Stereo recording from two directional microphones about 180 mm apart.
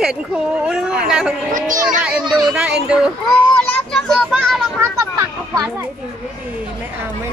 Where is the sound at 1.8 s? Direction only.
5° right (ahead or behind).